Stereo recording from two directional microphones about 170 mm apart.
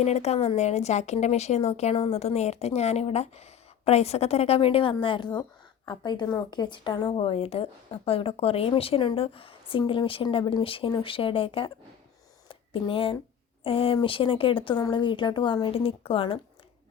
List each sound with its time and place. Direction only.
0.0 s a woman's voice: 40° left (ahead or behind)
12.5 s a sound: 30° left (ahead or behind)
13.7 s a woman's voice: 30° left (ahead or behind)